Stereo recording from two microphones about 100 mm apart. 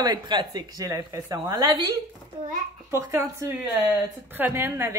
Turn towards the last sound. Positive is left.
turn(degrees=-25)  # may be behind; listen again after turning